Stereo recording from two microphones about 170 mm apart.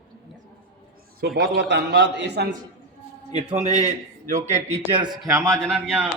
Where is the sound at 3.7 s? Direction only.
45° right (ahead or behind).